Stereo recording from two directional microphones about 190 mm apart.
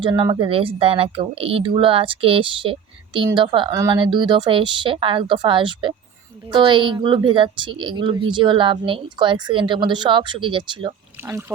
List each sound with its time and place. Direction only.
0.0 s speech: 25° right (ahead or behind)
11.3 s speech: 10° right (ahead or behind)